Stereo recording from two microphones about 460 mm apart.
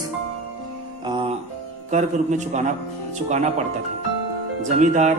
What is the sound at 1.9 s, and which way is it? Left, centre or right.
A man's voice, centre.